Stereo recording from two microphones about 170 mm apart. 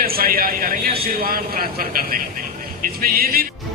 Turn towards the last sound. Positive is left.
turn(degrees=-60)  # may be behind; listen again after turning